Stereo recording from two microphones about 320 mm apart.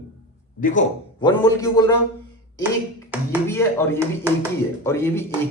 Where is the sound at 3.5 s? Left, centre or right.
Centre.